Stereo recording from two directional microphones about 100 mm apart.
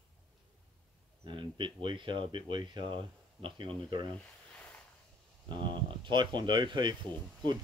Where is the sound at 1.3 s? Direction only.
55° right (ahead or behind).